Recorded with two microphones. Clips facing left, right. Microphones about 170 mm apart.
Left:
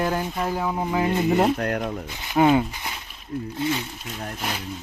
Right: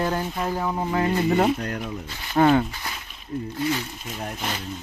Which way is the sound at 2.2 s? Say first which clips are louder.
Even; 10° left (ahead or behind).